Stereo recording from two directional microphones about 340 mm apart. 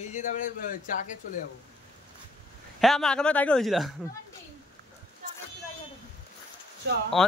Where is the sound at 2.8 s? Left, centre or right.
Centre.